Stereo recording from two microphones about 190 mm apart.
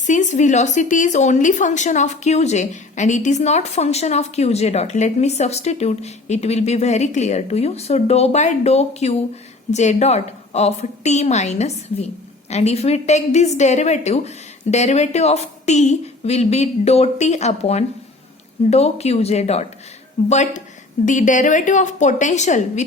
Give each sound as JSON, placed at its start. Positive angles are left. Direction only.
{"t": 0.0, "sound": "a woman's voice", "side_deg": 40}